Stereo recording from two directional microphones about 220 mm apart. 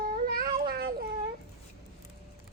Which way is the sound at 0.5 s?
45° right (ahead or behind).